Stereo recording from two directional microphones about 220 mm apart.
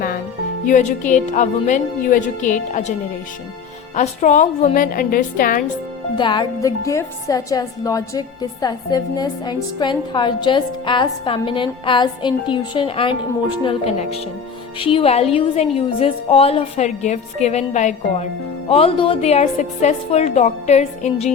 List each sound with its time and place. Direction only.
0.6 s speech: 35° left (ahead or behind)
3.9 s speech: 35° left (ahead or behind)
6.1 s a woman's voice: 20° left (ahead or behind)